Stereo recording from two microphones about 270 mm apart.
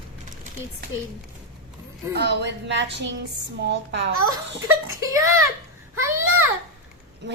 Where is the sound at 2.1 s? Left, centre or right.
Right.